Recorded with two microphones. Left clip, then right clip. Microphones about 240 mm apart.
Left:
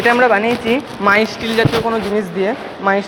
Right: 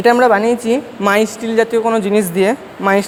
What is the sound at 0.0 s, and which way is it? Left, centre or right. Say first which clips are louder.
Speech: right 1 dB; right.